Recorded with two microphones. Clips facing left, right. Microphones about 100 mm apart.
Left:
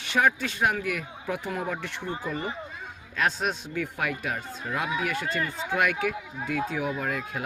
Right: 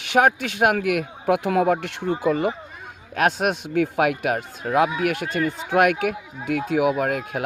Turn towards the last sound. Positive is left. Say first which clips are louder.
# right 7 dB
turn(degrees=-65)  # may be behind; listen again after turning